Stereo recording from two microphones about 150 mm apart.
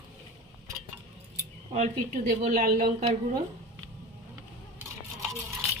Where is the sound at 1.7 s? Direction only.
50° right (ahead or behind).